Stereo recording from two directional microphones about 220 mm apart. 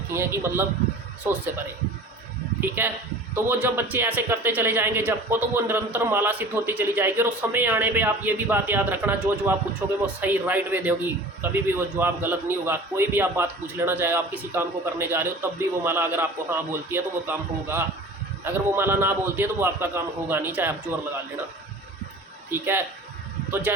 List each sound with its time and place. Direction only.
0.1 s a man's voice: 10° right (ahead or behind)
2.6 s a man's voice: 10° right (ahead or behind)
22.4 s a man's voice: 10° right (ahead or behind)